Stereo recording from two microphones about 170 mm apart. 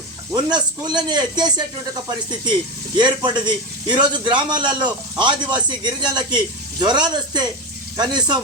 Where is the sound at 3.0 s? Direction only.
25° right (ahead or behind).